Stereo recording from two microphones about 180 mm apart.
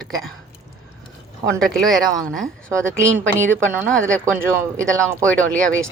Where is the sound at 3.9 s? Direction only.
5° left (ahead or behind).